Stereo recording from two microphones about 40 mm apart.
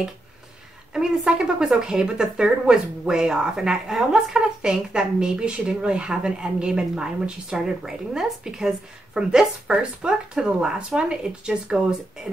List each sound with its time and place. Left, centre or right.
0.9 s a woman's voice: centre